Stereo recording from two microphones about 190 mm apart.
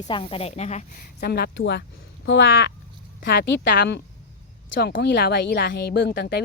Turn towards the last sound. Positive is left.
turn(degrees=65)  # may be behind; listen again after turning